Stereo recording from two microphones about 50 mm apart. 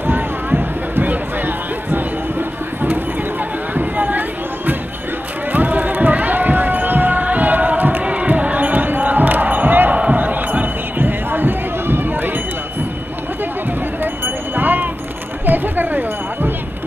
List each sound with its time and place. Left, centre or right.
0.0 s a sound: right
5.5 s run: right
8.0 s crowd: right
8.3 s basketball bounce: right
10.1 s music: right
14.0 s a sound: right